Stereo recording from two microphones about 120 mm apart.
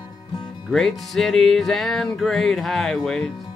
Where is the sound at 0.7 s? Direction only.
Centre (ahead or behind).